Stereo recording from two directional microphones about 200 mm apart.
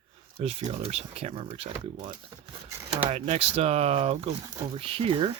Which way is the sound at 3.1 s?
30° right (ahead or behind).